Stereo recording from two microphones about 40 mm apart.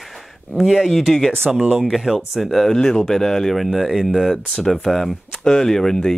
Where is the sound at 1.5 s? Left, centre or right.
Centre.